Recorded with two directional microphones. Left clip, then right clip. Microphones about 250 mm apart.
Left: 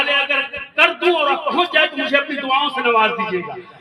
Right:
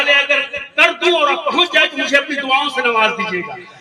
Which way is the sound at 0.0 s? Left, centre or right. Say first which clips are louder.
Right 4 dB; centre.